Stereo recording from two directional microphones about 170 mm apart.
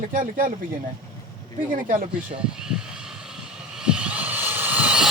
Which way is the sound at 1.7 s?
50° right (ahead or behind).